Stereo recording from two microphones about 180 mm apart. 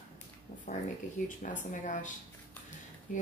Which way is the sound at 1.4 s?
45° left (ahead or behind).